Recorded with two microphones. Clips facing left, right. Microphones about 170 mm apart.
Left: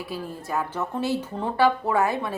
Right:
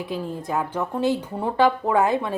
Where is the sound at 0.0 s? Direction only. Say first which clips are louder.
Right 4 dB; 20° right (ahead or behind).